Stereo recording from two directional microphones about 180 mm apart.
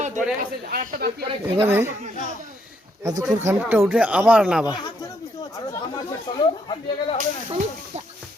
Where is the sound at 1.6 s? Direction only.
15° right (ahead or behind).